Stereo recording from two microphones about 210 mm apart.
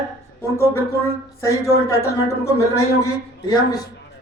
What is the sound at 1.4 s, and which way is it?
A man's voice, 15° left (ahead or behind).